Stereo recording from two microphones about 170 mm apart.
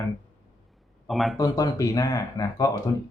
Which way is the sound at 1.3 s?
20° left (ahead or behind).